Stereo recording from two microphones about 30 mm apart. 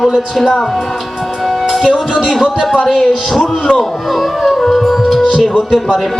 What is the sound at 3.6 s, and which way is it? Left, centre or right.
Speech, left.